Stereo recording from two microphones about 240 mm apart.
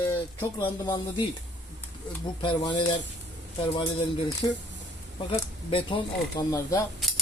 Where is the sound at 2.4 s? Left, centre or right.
Centre.